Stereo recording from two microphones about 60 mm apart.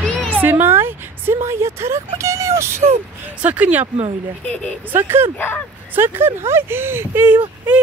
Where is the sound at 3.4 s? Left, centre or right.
Right.